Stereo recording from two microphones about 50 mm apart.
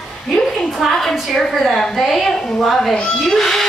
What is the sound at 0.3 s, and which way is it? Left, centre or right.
A woman's voice, centre.